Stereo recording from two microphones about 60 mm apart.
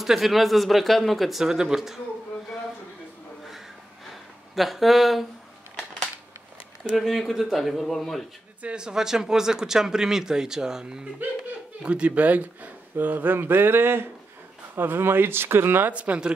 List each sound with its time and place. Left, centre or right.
0.0 s speech: centre
4.1 s a sound: centre
6.8 s speech: centre
8.6 s speech: centre; by 15.9 s right
15.9 s speech: right